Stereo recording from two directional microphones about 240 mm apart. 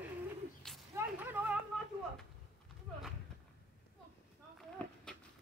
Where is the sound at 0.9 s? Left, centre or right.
Centre.